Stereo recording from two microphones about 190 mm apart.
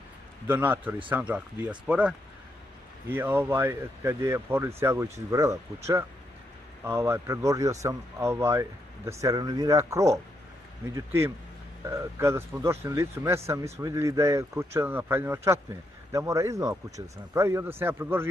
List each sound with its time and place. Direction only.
0.5 s a man's voice: 10° right (ahead or behind)
6.8 s a man's voice: 15° right (ahead or behind)